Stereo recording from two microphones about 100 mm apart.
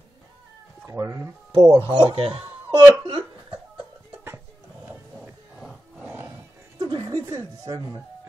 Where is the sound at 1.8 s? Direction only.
60° right (ahead or behind).